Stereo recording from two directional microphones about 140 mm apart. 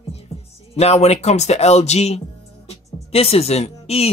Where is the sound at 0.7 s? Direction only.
50° left (ahead or behind).